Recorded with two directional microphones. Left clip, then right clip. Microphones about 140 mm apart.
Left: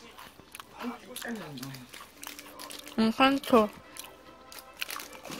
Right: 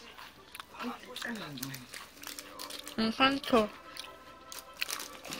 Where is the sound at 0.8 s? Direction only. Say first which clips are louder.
Even; 10° left (ahead or behind).